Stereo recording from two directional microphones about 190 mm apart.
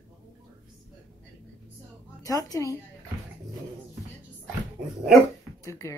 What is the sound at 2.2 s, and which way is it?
Speech, 20° left (ahead or behind).